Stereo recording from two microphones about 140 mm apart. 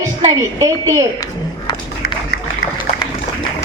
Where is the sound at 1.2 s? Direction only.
30° left (ahead or behind).